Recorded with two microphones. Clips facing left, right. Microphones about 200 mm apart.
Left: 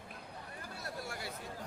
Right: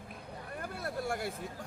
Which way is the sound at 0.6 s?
55° right (ahead or behind).